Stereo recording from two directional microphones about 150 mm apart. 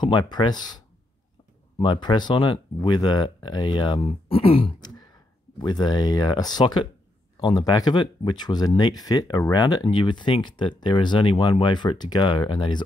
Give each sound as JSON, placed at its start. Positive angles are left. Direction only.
{"t": 0.0, "sound": "speech", "side_deg": 30}
{"t": 4.8, "sound": "a sound", "side_deg": 25}
{"t": 5.6, "sound": "speech", "side_deg": 30}